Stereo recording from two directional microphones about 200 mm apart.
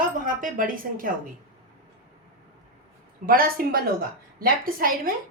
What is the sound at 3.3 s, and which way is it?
A woman's voice, 45° right (ahead or behind).